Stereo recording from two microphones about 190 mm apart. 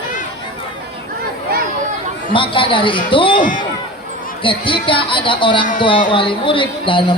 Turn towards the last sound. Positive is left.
turn(degrees=25)  # may be behind; listen again after turning